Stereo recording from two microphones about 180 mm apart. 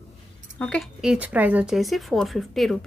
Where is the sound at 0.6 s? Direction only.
5° left (ahead or behind).